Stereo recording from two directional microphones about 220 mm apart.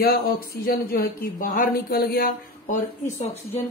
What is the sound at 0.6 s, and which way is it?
Speech, 45° left (ahead or behind).